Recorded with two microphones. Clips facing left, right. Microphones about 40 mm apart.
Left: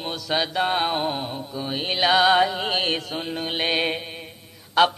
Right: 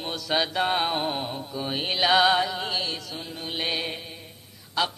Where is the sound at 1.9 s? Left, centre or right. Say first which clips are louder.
Left 2 dB; centre.